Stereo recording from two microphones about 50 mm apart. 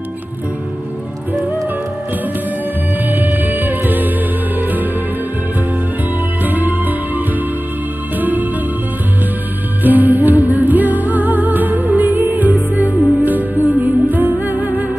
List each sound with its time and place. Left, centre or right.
3.1 s music: right
6.4 s music: right
9.8 s music: right